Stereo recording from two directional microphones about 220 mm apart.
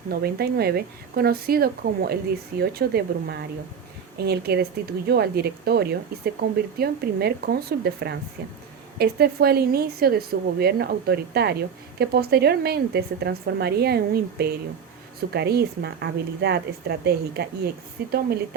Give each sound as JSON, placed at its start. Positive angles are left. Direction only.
{"t": 0.1, "sound": "speech", "side_deg": -45}